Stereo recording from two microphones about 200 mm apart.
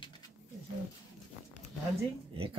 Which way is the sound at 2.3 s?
25° right (ahead or behind).